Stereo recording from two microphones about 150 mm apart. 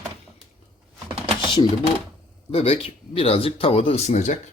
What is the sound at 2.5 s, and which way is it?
Speech, 40° left (ahead or behind).